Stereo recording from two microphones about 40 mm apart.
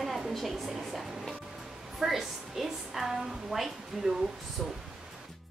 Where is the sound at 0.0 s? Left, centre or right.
Centre.